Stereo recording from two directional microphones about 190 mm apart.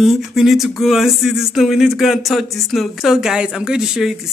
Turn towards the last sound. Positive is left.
turn(degrees=0)  # may be behind; listen again after turning